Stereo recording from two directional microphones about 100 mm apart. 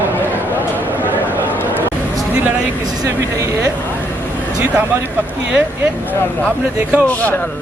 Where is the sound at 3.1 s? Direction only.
30° right (ahead or behind).